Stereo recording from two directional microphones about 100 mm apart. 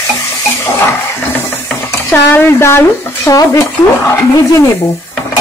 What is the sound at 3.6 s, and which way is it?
Speech, 25° left (ahead or behind).